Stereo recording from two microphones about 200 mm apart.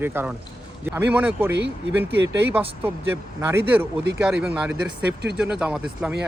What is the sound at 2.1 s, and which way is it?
Speech, 60° right (ahead or behind).